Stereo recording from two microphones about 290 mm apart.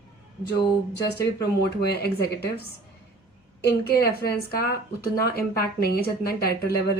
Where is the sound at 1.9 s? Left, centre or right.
Left.